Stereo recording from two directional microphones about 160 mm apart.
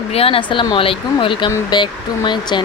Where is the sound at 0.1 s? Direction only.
35° left (ahead or behind).